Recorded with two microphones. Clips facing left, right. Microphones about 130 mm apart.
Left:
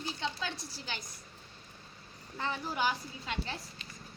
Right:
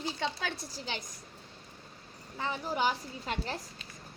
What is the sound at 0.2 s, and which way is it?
Speech, 65° right (ahead or behind).